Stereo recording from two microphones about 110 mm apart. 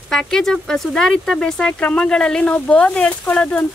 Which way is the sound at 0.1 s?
5° left (ahead or behind).